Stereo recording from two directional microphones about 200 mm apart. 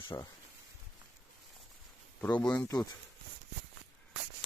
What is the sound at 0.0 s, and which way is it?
Speech, 20° left (ahead or behind).